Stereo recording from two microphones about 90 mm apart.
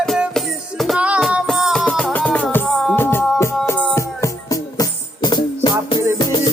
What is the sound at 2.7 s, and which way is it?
Music, centre (ahead or behind).